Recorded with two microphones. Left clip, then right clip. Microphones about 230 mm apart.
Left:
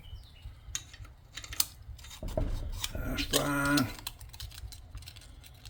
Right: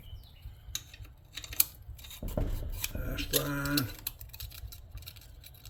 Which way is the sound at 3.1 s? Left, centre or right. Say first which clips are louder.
Left 4 dB; left.